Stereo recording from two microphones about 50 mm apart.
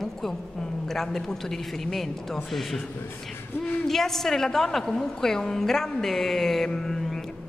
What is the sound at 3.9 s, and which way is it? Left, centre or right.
A woman's voice, centre.